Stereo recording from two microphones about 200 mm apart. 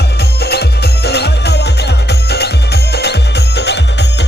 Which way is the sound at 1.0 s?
55° left (ahead or behind).